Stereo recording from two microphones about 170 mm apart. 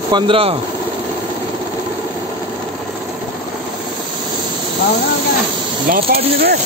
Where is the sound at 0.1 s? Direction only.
30° right (ahead or behind).